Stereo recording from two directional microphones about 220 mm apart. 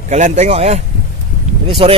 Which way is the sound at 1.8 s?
25° right (ahead or behind).